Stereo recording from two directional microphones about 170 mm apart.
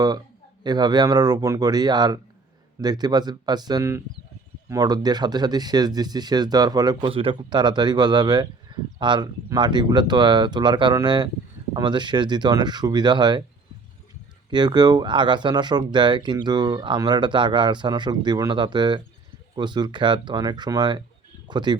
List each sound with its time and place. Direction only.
0.6 s speech: 25° right (ahead or behind)
14.5 s speech: 25° right (ahead or behind)